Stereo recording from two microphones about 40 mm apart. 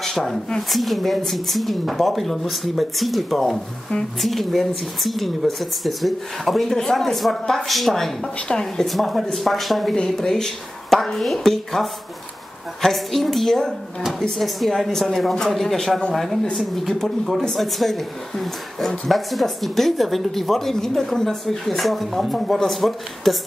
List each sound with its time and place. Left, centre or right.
0.0 s a sound: centre
0.6 s speech: centre
8.5 s speech: centre
8.8 s speech: centre
10.0 s speech: centre
12.9 s speech: centre
17.6 s speech: centre